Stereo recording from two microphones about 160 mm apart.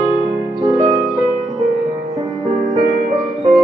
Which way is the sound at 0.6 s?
20° right (ahead or behind).